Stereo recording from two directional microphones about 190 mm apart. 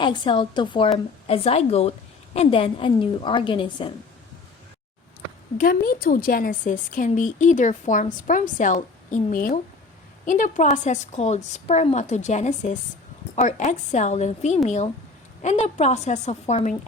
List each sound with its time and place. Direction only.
0.0 s a woman's voice: 25° left (ahead or behind)
5.5 s a woman's voice: 50° left (ahead or behind)